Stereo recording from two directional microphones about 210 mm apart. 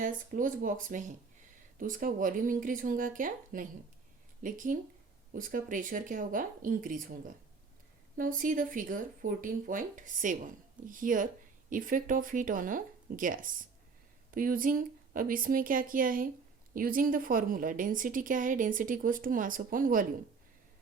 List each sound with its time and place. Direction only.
0.0 s a woman's voice: 40° right (ahead or behind)